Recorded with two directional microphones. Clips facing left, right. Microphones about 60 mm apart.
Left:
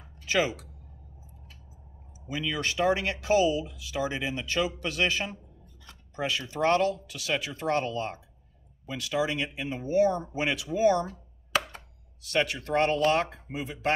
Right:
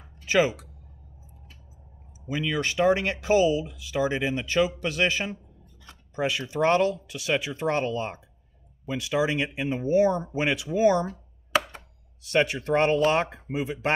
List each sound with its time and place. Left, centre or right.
0.2 s speech: right
2.2 s speech: right